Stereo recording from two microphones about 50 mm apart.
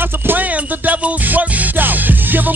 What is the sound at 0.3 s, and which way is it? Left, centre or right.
Music, right.